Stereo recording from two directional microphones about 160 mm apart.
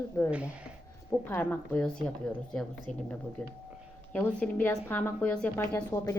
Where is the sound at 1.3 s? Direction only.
10° left (ahead or behind).